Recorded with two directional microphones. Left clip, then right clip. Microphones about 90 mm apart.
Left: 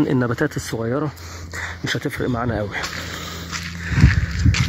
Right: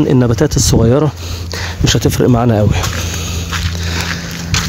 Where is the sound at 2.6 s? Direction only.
35° right (ahead or behind).